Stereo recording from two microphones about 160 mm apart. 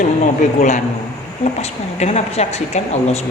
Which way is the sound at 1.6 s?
45° left (ahead or behind).